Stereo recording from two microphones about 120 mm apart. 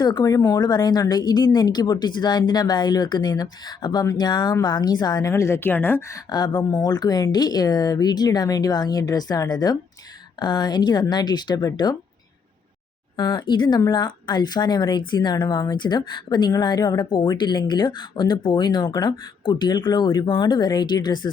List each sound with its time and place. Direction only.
0.0 s speech: 35° left (ahead or behind)
5.3 s a woman's voice: 20° left (ahead or behind)
6.3 s speech: 35° left (ahead or behind)
13.1 s speech: 40° left (ahead or behind)